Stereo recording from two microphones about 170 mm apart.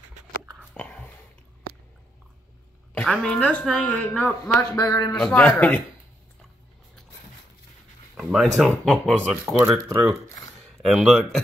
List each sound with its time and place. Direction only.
0.7 s whispering: 5° left (ahead or behind)
2.9 s a woman's voice: 5° left (ahead or behind)
4.6 s a man's voice: 20° left (ahead or behind)
5.1 s a woman's voice: 5° left (ahead or behind)
8.2 s speech: centre (ahead or behind)
10.8 s speech: centre (ahead or behind)